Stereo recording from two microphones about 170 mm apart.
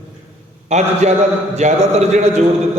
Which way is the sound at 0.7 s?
40° right (ahead or behind).